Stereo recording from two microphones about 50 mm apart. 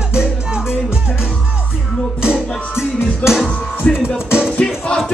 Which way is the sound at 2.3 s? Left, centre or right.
Centre.